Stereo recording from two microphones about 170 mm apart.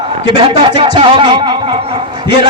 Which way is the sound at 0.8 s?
30° right (ahead or behind).